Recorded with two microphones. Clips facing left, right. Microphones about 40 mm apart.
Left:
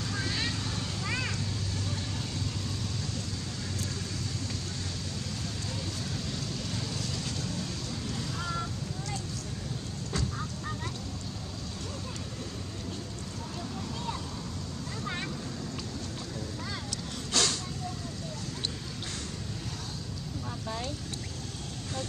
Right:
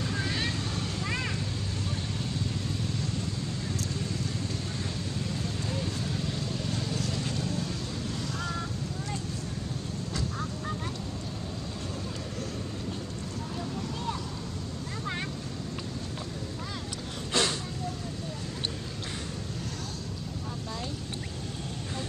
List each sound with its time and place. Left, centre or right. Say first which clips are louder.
0.0 s vehicle: right 2 dB; right
5.7 s vehicle: right 4 dB; right
8.1 s a sound: even; centre
17.3 s vehicle: right 2 dB; right